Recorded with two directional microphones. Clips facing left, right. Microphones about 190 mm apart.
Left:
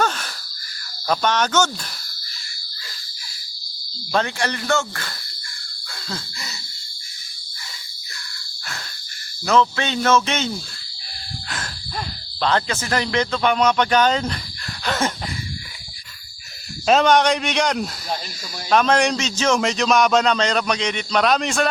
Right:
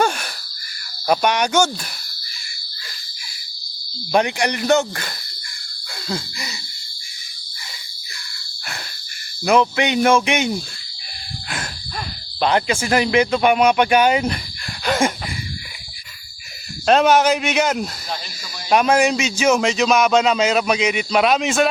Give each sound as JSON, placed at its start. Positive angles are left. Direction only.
{"t": 0.0, "sound": "wheeze", "side_deg": -10}
{"t": 1.0, "sound": "speech", "side_deg": -15}
{"t": 4.1, "sound": "speech", "side_deg": -15}
{"t": 6.1, "sound": "a sound", "side_deg": -15}
{"t": 9.4, "sound": "speech", "side_deg": -15}
{"t": 11.4, "sound": "a sound", "side_deg": -10}
{"t": 12.4, "sound": "speech", "side_deg": -15}
{"t": 14.8, "sound": "a sound", "side_deg": -10}
{"t": 16.8, "sound": "a man's voice", "side_deg": 0}